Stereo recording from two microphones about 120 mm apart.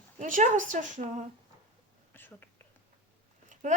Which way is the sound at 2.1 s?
15° left (ahead or behind).